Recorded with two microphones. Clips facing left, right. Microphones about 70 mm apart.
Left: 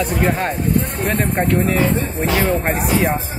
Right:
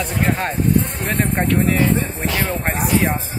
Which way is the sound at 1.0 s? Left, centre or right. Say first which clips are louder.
Left 1 dB; centre.